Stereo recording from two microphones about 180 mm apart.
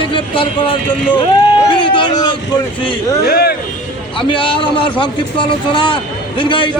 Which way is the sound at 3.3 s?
60° left (ahead or behind).